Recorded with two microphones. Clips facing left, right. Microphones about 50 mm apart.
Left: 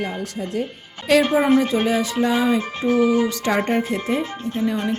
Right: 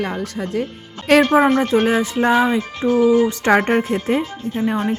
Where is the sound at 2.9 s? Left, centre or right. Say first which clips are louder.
Right 3 dB; left.